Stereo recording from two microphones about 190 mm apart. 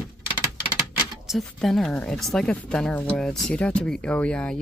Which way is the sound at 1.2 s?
Centre (ahead or behind).